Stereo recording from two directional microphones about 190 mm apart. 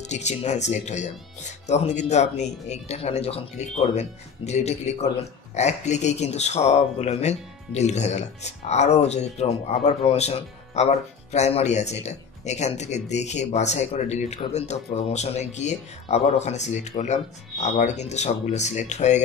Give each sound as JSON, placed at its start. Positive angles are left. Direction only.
{"t": 0.0, "sound": "speech", "side_deg": 35}